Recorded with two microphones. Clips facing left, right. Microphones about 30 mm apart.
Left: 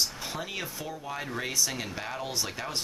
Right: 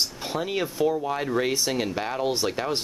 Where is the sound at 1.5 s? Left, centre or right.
Right.